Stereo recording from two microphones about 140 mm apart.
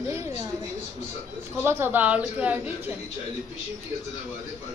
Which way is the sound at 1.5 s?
20° right (ahead or behind).